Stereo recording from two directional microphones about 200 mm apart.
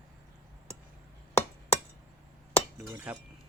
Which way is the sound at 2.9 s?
5° right (ahead or behind).